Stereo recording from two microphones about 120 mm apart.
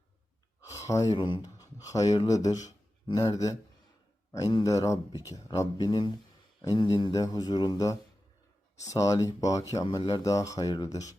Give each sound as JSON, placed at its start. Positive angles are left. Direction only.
{"t": 0.7, "sound": "speech", "side_deg": 25}